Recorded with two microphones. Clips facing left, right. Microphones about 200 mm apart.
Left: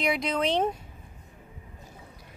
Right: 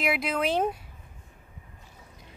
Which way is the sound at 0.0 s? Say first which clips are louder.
Left 1 dB; 5° right (ahead or behind).